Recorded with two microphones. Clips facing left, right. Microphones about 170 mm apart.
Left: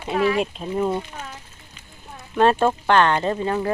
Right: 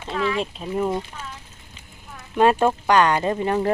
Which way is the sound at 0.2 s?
40° left (ahead or behind).